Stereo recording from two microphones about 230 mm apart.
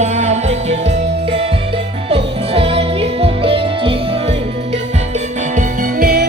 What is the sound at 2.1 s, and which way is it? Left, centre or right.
Music, right.